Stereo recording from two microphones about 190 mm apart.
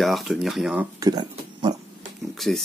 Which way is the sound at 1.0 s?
20° right (ahead or behind).